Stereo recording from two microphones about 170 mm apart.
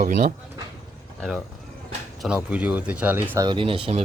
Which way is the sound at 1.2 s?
Centre (ahead or behind).